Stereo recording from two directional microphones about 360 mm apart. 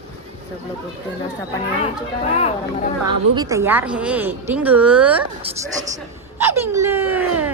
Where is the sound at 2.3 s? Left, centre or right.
Centre.